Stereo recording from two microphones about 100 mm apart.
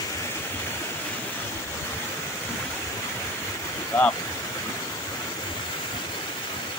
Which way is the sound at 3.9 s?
20° left (ahead or behind).